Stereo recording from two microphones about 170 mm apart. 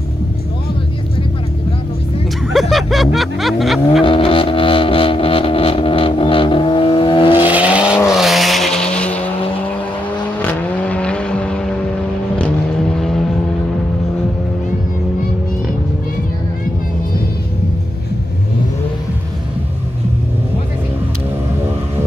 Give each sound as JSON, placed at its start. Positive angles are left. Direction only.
{"t": 2.5, "sound": "music", "side_deg": 0}
{"t": 4.0, "sound": "music", "side_deg": 30}
{"t": 7.3, "sound": "vehicle", "side_deg": -10}
{"t": 10.4, "sound": "vehicle", "side_deg": 5}